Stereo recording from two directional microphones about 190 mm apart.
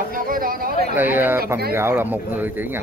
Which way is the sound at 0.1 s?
50° right (ahead or behind).